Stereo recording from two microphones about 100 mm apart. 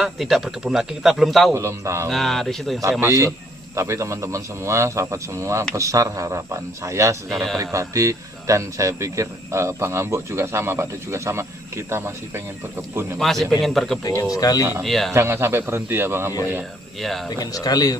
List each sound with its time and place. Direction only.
0.0 s a man's voice: centre (ahead or behind)
1.5 s speech: 30° right (ahead or behind)
2.0 s a man's voice: centre (ahead or behind)
2.8 s speech: 30° right (ahead or behind)
13.2 s a man's voice: centre (ahead or behind)
14.3 s speech: 40° left (ahead or behind)
14.8 s a man's voice: 5° left (ahead or behind)
15.1 s speech: 25° right (ahead or behind)
17.0 s a man's voice: 5° left (ahead or behind)
17.4 s speech: 40° left (ahead or behind)